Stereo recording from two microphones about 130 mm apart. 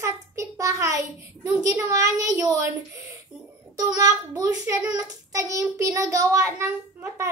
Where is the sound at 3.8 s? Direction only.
30° right (ahead or behind).